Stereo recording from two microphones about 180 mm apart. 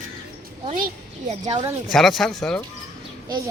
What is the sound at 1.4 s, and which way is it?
Speech, 20° right (ahead or behind).